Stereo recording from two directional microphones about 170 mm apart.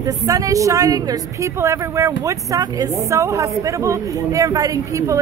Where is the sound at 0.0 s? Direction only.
20° right (ahead or behind).